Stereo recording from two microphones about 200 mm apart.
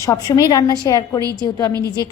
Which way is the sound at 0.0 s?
20° left (ahead or behind).